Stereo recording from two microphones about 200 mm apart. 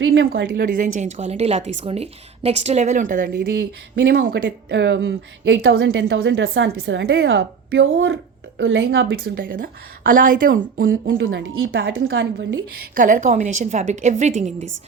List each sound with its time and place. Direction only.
0.0 s a woman's voice: 70° right (ahead or behind)
0.3 s speech: 55° right (ahead or behind)
0.8 s a woman's voice: 35° right (ahead or behind)
4.4 s a woman's voice: 65° right (ahead or behind)
9.2 s speech: 45° right (ahead or behind)
11.0 s a woman's voice: 70° right (ahead or behind)
13.0 s a woman's voice: 40° right (ahead or behind)